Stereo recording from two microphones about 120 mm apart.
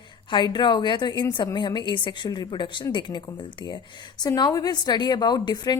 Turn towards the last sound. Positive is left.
turn(degrees=35)  # may be behind; listen again after turning